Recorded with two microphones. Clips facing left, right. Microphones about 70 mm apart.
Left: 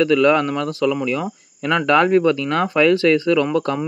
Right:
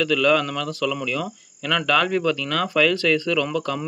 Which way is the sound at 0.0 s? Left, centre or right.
Left.